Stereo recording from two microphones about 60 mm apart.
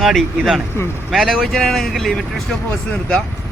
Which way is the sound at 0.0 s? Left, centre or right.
Centre.